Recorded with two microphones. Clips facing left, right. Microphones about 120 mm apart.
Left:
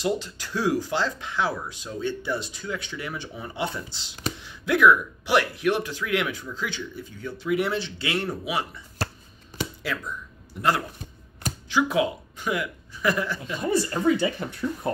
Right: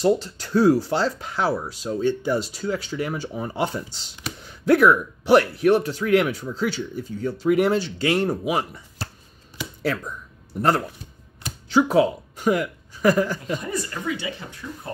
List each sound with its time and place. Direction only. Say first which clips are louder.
0.0 s speech: right 6 dB; 35° right (ahead or behind)
11.7 s speech: right 5 dB; 40° right (ahead or behind)
13.6 s speech: left 5 dB; 30° left (ahead or behind)